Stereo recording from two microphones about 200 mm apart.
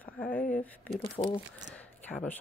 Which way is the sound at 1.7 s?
5° left (ahead or behind).